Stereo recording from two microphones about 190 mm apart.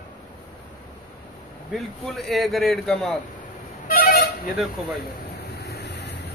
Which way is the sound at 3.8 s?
50° left (ahead or behind).